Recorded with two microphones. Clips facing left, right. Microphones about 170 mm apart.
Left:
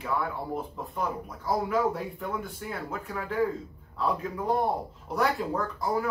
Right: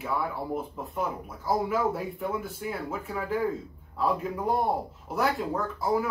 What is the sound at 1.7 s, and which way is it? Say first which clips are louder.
A man's voice: even; 5° right (ahead or behind).